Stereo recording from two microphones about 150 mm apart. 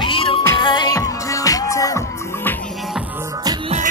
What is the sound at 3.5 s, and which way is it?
Music, 25° right (ahead or behind).